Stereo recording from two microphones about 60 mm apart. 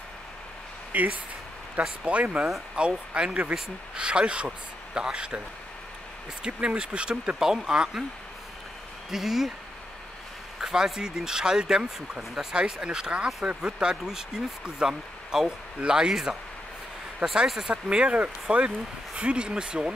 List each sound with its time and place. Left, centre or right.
0.9 s speech: right
6.4 s speech: centre
9.1 s speech: centre
10.6 s speech: centre